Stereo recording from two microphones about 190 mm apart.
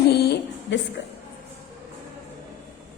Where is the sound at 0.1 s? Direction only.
60° left (ahead or behind).